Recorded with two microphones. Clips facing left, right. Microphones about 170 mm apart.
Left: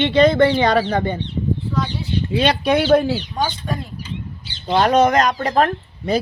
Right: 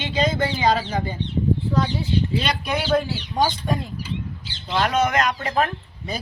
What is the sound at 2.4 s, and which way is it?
Speech, 65° left (ahead or behind).